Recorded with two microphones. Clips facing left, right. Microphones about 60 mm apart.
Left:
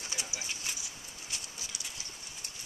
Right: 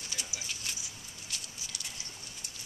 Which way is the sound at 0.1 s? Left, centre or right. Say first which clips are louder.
Left 1 dB; left.